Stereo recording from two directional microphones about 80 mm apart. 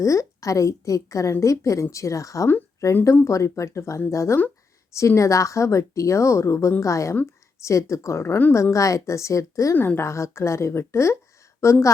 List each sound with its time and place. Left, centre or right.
0.0 s a woman's voice: left
9.7 s speech: left
10.0 s a woman's voice: left